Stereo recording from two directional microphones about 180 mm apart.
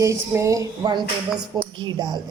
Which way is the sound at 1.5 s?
25° right (ahead or behind).